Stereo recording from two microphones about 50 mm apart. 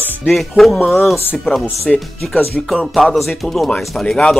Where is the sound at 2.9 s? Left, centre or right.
Centre.